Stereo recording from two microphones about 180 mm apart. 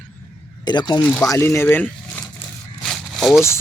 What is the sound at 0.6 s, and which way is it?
Speech, 25° left (ahead or behind).